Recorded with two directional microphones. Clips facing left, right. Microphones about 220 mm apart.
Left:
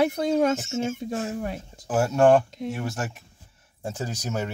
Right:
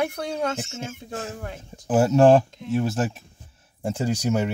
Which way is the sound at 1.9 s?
20° right (ahead or behind).